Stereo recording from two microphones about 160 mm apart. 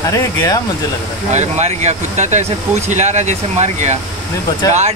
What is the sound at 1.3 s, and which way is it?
Speech, 45° right (ahead or behind).